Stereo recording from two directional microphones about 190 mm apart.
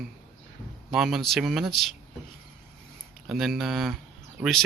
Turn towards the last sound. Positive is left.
turn(degrees=0)  # may be behind; listen again after turning